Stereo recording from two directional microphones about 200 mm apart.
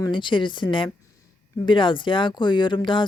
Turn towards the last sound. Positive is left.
turn(degrees=25)  # may be behind; listen again after turning